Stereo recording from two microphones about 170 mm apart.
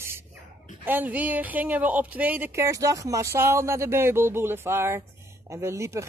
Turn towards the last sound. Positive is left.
turn(degrees=-15)  # may be behind; listen again after turning